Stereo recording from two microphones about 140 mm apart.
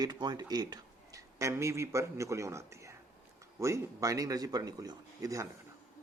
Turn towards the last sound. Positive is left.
turn(degrees=-25)  # may be behind; listen again after turning